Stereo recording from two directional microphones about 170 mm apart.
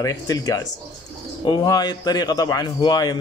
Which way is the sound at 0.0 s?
20° left (ahead or behind).